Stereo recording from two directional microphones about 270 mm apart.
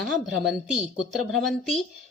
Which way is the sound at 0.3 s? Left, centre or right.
Centre.